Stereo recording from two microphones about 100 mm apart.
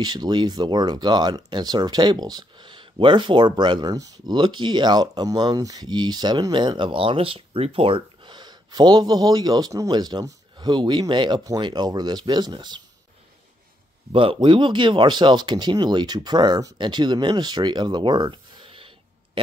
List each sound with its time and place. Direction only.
0.0 s speech: 45° right (ahead or behind)
4.4 s speech: 50° right (ahead or behind)
14.1 s speech: 60° right (ahead or behind)